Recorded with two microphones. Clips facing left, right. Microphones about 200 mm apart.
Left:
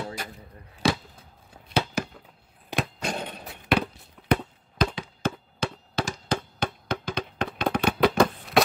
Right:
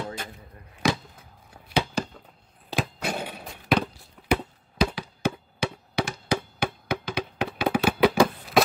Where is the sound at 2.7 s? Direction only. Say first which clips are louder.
Right 1 dB; 5° right (ahead or behind).